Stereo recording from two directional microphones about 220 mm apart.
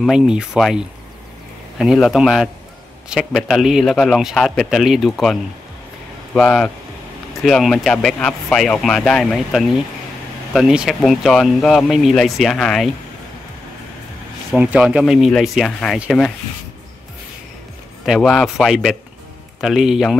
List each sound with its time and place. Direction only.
0.0 s speech: centre (ahead or behind)
14.5 s speech: 5° right (ahead or behind)
18.0 s speech: centre (ahead or behind)